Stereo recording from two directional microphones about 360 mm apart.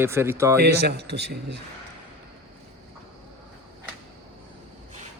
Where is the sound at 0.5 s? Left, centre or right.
Right.